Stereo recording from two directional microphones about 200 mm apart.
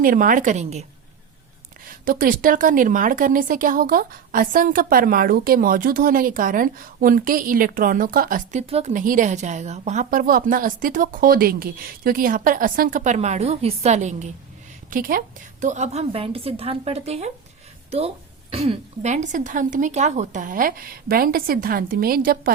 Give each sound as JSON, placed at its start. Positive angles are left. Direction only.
{"t": 0.0, "sound": "a woman's voice", "side_deg": -45}
{"t": 1.9, "sound": "a woman's voice", "side_deg": -45}
{"t": 18.5, "sound": "speech", "side_deg": -30}